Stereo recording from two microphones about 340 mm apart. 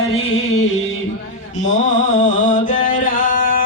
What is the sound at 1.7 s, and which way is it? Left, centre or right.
Music, left.